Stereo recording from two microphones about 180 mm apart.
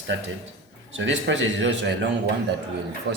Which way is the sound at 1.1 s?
90° right.